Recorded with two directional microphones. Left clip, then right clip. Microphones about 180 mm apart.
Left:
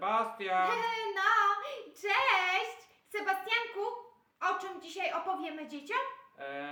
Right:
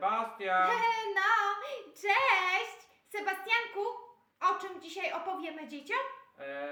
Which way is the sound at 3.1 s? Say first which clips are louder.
Even; 20° right (ahead or behind).